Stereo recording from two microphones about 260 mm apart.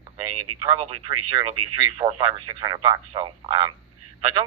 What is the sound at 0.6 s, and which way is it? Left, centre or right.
Speech, centre.